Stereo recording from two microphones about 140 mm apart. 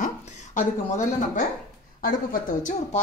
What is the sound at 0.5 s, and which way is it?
Speech, 65° left (ahead or behind).